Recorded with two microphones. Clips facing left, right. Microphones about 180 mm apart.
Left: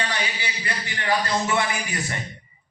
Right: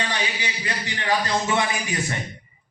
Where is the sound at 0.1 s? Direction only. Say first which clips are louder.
Right 1 dB; 20° right (ahead or behind).